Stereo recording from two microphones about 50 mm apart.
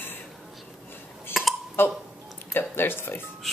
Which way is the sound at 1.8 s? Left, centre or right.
Left.